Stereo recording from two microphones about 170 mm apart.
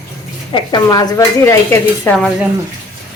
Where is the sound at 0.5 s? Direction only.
25° left (ahead or behind).